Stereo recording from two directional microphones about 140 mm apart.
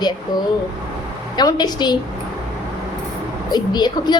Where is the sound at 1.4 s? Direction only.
30° left (ahead or behind).